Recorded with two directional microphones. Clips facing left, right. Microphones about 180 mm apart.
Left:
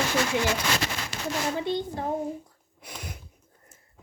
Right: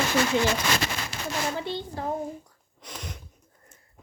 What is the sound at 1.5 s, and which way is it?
Speech, 20° left (ahead or behind).